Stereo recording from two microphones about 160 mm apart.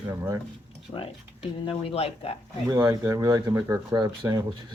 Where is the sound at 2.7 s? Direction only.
25° right (ahead or behind).